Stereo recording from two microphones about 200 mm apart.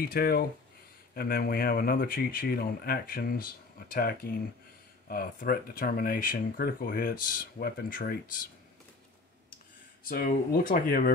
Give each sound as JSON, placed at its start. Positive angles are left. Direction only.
{"t": 0.0, "sound": "speech", "side_deg": 50}
{"t": 10.0, "sound": "speech", "side_deg": 45}